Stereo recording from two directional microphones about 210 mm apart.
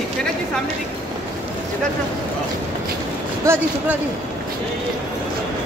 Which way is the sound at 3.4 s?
10° right (ahead or behind).